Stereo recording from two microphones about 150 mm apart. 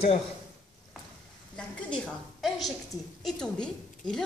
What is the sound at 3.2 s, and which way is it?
A woman's voice, 5° left (ahead or behind).